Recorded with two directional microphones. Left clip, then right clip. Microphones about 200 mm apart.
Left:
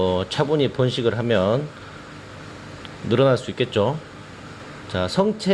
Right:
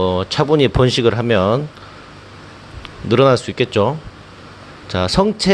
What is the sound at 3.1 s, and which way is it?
Speech, 20° right (ahead or behind).